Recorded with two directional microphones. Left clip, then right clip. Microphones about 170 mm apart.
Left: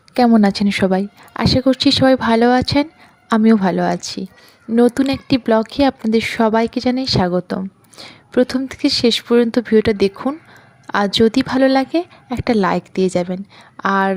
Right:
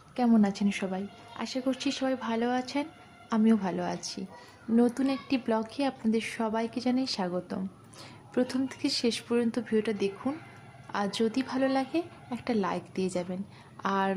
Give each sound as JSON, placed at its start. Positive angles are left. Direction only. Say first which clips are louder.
{"t": 0.3, "sound": "a woman's voice", "louder": "left 13 dB", "side_deg": 50}